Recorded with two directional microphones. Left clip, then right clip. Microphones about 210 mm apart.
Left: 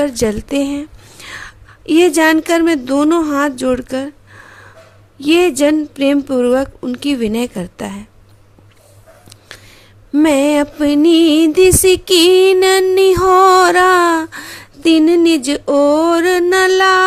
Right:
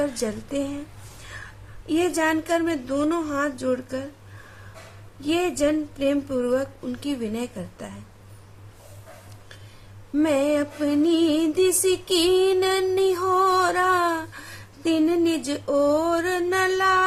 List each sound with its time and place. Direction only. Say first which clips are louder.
0.0 s music: left 11 dB; 45° left (ahead or behind)
1.2 s whispering: left 11 dB; 50° left (ahead or behind)
1.9 s music: left 12 dB; 50° left (ahead or behind)
5.2 s music: left 11 dB; 50° left (ahead or behind)
10.2 s music: left 9 dB; 45° left (ahead or behind)